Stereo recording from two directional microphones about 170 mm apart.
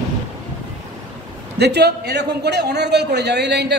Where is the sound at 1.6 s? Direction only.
75° right (ahead or behind).